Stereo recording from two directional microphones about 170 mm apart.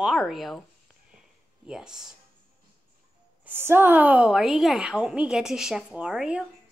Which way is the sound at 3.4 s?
10° right (ahead or behind).